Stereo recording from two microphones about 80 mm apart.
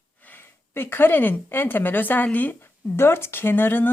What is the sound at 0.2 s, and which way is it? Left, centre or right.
Speech, left.